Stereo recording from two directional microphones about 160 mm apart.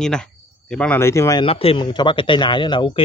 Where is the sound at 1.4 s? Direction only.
35° left (ahead or behind).